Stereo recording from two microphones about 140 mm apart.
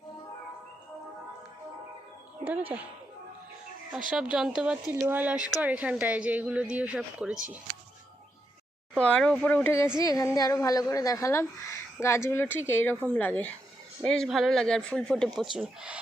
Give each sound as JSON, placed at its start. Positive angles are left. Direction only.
{"t": 2.4, "sound": "speech", "side_deg": -10}
{"t": 3.9, "sound": "speech", "side_deg": -5}
{"t": 9.0, "sound": "a woman's voice", "side_deg": 5}
{"t": 15.5, "sound": "speech", "side_deg": -10}